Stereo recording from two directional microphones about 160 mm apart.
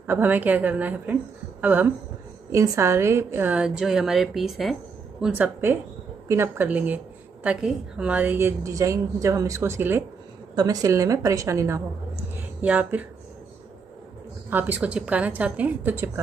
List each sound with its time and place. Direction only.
0.0 s a woman's voice: 15° right (ahead or behind)
10.5 s a woman's voice: 25° right (ahead or behind)
14.5 s a woman's voice: 10° right (ahead or behind)